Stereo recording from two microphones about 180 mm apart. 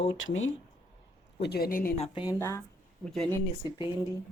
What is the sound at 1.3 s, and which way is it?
Speech, 65° left (ahead or behind).